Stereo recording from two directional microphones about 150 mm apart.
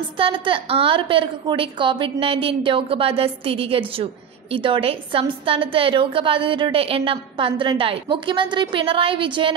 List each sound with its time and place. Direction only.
0.2 s a woman's voice: 35° right (ahead or behind)